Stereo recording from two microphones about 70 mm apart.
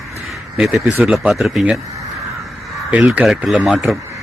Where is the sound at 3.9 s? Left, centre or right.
Centre.